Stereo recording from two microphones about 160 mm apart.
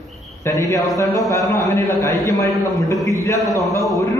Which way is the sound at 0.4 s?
20° left (ahead or behind).